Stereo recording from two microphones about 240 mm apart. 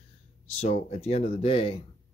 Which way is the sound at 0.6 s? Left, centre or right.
Left.